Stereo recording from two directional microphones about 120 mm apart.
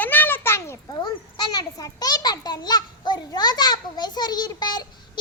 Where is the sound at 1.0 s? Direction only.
35° left (ahead or behind).